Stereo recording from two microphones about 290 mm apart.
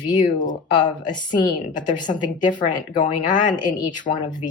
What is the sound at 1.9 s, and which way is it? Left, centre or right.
Speech, left.